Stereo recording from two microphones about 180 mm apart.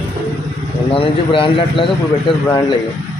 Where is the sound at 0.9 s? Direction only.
30° left (ahead or behind).